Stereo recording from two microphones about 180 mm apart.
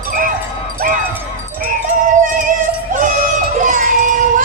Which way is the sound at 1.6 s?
45° right (ahead or behind).